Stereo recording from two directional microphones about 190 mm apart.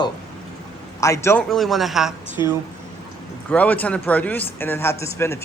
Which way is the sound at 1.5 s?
Centre (ahead or behind).